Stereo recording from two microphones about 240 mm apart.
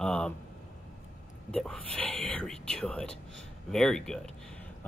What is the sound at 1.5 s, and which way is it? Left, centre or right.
Speech, centre.